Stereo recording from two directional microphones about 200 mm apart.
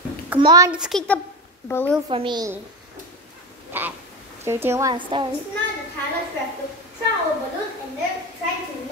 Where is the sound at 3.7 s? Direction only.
10° right (ahead or behind).